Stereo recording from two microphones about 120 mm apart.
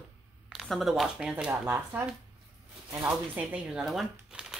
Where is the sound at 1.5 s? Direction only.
20° right (ahead or behind).